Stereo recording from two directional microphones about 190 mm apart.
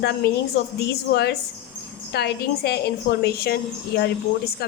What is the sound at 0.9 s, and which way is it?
A woman's voice, 60° left (ahead or behind).